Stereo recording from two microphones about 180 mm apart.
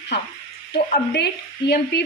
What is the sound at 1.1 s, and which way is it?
Speech, 70° left (ahead or behind).